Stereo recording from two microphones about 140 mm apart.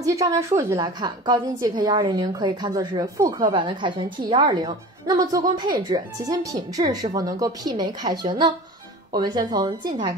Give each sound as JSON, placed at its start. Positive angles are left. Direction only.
{"t": 0.0, "sound": "a woman's voice", "side_deg": -25}
{"t": 0.7, "sound": "a woman's voice", "side_deg": -30}